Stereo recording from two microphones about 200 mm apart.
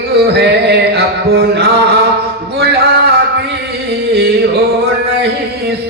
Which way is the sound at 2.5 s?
55° right (ahead or behind).